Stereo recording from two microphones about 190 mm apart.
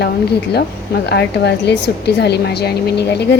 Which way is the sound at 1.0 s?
60° left (ahead or behind).